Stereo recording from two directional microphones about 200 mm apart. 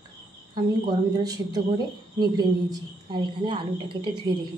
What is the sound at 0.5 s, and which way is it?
Speech, 20° right (ahead or behind).